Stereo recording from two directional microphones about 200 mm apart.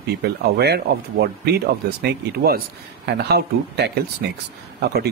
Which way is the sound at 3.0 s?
55° right (ahead or behind).